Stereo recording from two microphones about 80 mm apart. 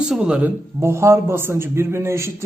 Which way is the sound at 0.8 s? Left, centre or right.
Right.